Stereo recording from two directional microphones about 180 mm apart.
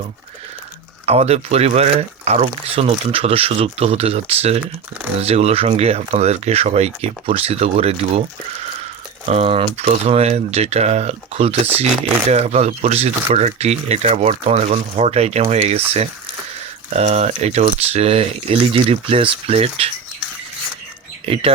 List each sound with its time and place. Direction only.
1.0 s speech: 35° right (ahead or behind)
9.2 s speech: 35° right (ahead or behind)
21.3 s speech: 30° right (ahead or behind)